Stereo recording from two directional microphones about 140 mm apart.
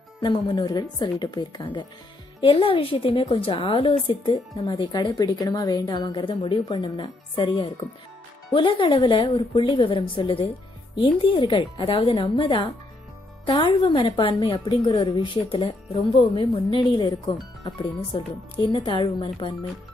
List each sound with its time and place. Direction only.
0.2 s a woman's voice: 35° left (ahead or behind)